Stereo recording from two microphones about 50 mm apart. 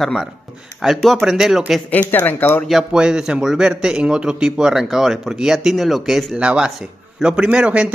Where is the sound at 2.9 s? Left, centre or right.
Centre.